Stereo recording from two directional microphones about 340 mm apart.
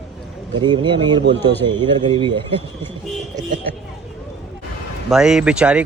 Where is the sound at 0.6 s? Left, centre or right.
Centre.